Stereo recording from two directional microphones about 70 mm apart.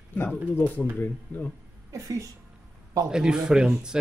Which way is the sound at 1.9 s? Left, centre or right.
Right.